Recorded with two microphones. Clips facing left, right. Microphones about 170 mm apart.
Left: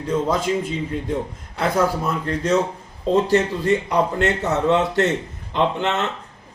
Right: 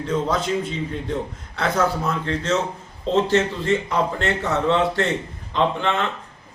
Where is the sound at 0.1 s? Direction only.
10° left (ahead or behind).